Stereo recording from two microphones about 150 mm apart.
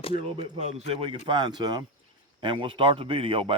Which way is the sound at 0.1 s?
40° right (ahead or behind).